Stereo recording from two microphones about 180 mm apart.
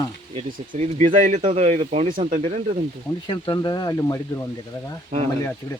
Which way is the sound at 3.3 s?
25° left (ahead or behind).